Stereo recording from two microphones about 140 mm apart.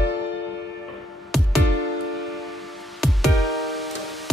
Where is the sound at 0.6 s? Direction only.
Centre (ahead or behind).